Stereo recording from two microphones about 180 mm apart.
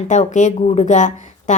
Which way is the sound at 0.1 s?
40° left (ahead or behind).